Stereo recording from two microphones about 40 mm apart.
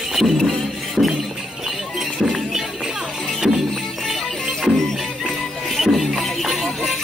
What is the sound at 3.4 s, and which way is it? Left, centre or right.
Music, centre.